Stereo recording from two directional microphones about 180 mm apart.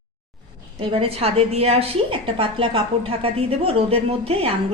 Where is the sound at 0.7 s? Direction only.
30° right (ahead or behind).